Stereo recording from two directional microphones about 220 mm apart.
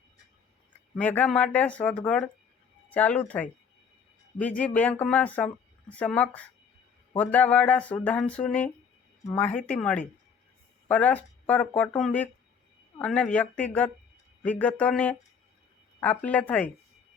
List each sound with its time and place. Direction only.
0.9 s speech: 5° left (ahead or behind)
4.6 s speech: 5° left (ahead or behind)